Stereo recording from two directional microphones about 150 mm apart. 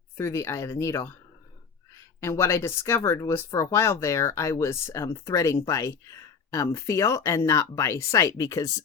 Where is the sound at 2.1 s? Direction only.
20° left (ahead or behind).